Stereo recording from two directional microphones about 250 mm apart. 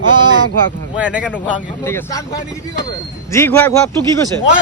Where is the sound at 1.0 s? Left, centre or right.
Centre.